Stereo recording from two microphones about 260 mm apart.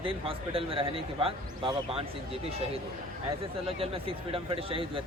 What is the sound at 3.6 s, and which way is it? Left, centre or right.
Speech, right.